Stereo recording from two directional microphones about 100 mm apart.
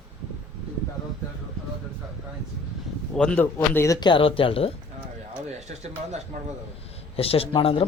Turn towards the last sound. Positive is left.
turn(degrees=65)  # may be behind; listen again after turning